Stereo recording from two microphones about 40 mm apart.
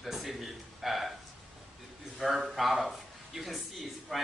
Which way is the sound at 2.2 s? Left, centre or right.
Centre.